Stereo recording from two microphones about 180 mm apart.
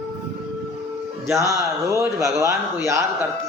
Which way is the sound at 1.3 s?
15° right (ahead or behind).